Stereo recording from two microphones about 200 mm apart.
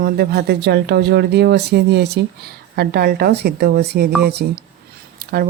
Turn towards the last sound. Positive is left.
turn(degrees=-50)  # may be behind; listen again after turning